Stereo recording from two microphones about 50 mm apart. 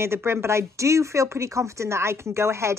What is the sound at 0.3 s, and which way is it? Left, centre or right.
Speech, right.